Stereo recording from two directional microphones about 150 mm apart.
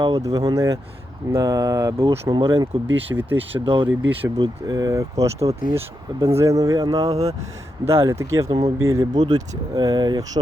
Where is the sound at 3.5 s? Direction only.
35° right (ahead or behind).